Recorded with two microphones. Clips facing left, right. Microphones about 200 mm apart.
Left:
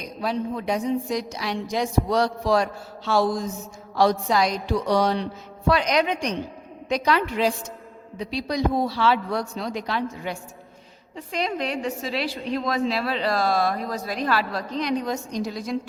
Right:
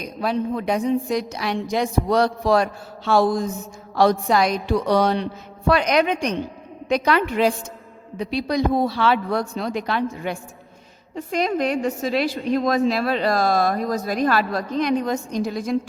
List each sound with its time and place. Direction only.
0.0 s a woman's voice: 60° right (ahead or behind)
11.1 s speech: 45° right (ahead or behind)